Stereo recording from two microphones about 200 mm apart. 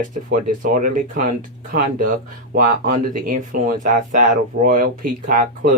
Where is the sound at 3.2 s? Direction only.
45° right (ahead or behind).